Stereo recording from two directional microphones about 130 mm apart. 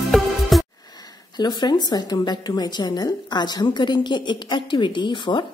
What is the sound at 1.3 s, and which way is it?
A woman's voice, 35° left (ahead or behind).